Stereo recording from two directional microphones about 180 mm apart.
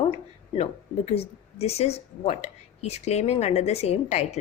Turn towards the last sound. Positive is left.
turn(degrees=35)  # may be behind; listen again after turning